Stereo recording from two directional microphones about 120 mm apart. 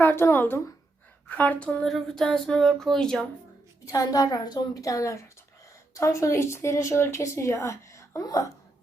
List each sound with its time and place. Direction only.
0.0 s speech: 15° left (ahead or behind)
3.8 s a woman's voice: 30° left (ahead or behind)